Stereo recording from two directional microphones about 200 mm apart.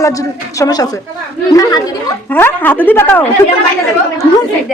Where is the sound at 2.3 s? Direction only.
10° left (ahead or behind).